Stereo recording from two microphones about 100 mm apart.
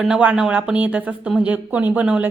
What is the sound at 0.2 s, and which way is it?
Speech, 10° right (ahead or behind).